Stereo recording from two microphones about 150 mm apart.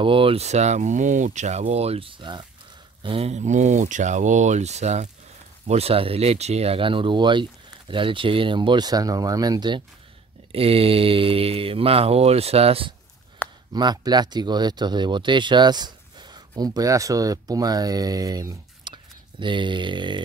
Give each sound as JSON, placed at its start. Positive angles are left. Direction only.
{"t": 0.0, "sound": "speech", "side_deg": -35}
{"t": 13.7, "sound": "speech", "side_deg": -30}